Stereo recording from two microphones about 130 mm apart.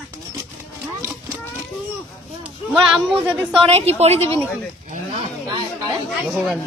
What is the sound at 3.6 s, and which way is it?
Speech, 50° right (ahead or behind).